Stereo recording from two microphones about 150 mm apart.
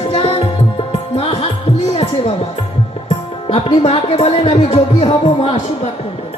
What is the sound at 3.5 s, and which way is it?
Speech, 45° left (ahead or behind).